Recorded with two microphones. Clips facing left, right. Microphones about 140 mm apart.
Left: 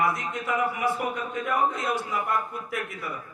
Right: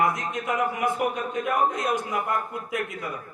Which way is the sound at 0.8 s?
55° right (ahead or behind).